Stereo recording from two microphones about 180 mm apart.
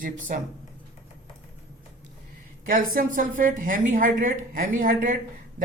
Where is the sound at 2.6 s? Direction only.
50° right (ahead or behind).